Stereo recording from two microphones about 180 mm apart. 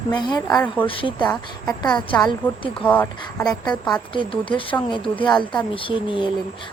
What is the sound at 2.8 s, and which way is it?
Speech, 10° left (ahead or behind).